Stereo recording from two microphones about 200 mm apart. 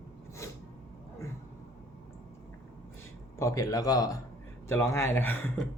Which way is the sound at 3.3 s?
15° left (ahead or behind).